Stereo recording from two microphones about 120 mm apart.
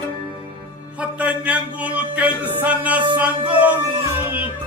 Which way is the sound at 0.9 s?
10° right (ahead or behind).